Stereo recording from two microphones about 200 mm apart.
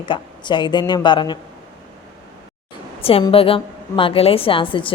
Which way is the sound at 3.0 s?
30° left (ahead or behind).